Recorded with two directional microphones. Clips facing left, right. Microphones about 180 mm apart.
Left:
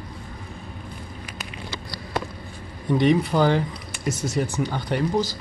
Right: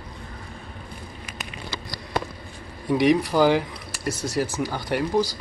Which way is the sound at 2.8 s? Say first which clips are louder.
Even; 5° right (ahead or behind).